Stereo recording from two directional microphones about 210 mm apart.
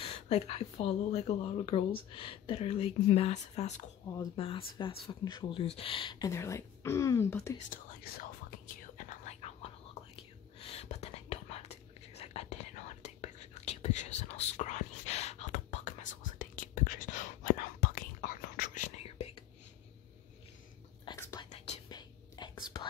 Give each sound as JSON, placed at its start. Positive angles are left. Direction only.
{"t": 0.0, "sound": "speech", "side_deg": 30}
{"t": 7.5, "sound": "whispering", "side_deg": 40}
{"t": 21.0, "sound": "whispering", "side_deg": 20}